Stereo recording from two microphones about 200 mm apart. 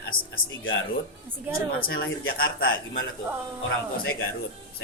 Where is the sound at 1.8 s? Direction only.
50° left (ahead or behind).